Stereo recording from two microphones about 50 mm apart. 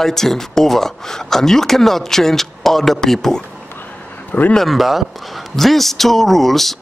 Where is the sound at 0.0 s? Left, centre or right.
Centre.